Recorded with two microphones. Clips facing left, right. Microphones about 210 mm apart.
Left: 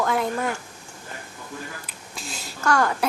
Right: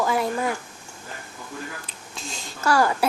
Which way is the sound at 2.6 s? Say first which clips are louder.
Right 1 dB; 5° right (ahead or behind).